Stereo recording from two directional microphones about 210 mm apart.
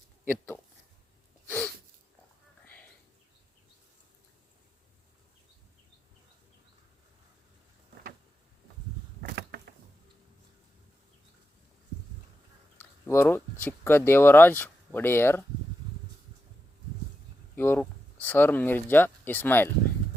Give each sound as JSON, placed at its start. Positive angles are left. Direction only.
{"t": 0.3, "sound": "speech", "side_deg": 10}
{"t": 1.5, "sound": "a sound", "side_deg": 5}
{"t": 12.8, "sound": "speech", "side_deg": 10}
{"t": 17.5, "sound": "speech", "side_deg": 10}